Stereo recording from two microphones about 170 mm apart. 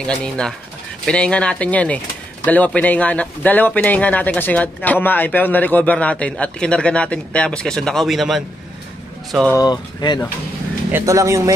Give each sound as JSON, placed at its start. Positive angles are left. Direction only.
{"t": 0.0, "sound": "speech", "side_deg": 5}
{"t": 9.5, "sound": "speech", "side_deg": 25}
{"t": 10.9, "sound": "speech", "side_deg": -15}